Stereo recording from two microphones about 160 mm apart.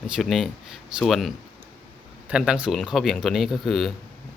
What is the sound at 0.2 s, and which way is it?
Speech, centre (ahead or behind).